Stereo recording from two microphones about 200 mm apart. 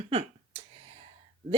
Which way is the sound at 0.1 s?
30° right (ahead or behind).